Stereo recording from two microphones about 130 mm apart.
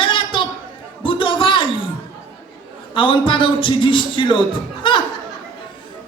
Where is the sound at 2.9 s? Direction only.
40° left (ahead or behind).